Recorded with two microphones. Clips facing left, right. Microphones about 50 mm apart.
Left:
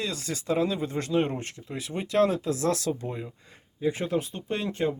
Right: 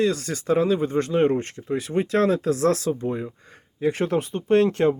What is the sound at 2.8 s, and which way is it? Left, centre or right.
Speech, right.